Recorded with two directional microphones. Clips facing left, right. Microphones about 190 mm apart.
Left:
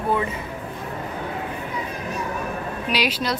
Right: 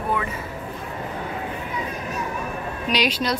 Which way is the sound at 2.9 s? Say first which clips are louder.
Right 1 dB; 10° left (ahead or behind).